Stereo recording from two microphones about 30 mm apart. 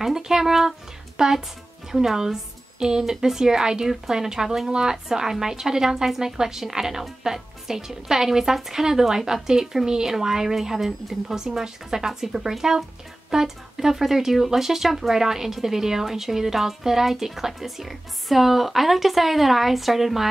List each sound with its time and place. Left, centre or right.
0.0 s speech: centre
4.9 s speech: centre